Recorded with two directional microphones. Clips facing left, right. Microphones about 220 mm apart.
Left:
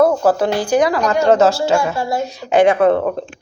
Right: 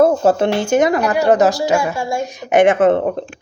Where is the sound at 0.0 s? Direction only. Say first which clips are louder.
Right 1 dB; 25° right (ahead or behind).